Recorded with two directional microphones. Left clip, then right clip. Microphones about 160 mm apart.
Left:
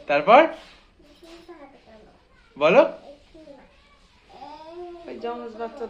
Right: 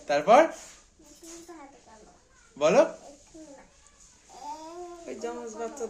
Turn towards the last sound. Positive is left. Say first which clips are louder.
# left 5 dB
turn(degrees=-90)